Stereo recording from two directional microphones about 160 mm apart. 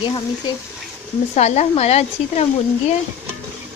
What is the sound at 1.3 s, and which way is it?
A woman's voice, 45° left (ahead or behind).